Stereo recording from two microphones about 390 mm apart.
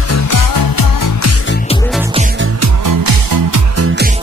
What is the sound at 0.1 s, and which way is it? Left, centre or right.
Music, left.